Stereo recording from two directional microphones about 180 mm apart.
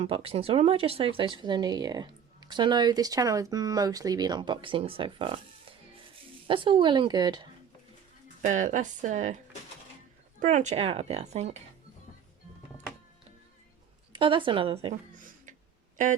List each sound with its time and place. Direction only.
0.0 s speech: 30° right (ahead or behind)
6.5 s speech: 30° right (ahead or behind)
8.4 s speech: 45° right (ahead or behind)
10.4 s speech: 40° right (ahead or behind)
14.1 s speech: 25° right (ahead or behind)
15.2 s a sound: 50° right (ahead or behind)